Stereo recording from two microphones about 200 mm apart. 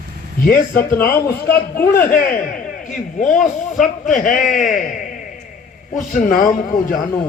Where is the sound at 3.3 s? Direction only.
Centre (ahead or behind).